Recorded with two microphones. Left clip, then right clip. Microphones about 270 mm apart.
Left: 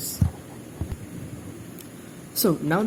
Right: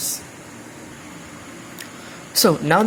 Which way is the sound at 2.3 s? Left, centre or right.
Right.